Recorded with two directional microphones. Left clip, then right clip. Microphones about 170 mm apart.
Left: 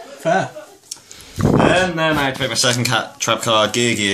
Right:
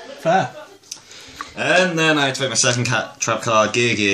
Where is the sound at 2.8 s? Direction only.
15° left (ahead or behind).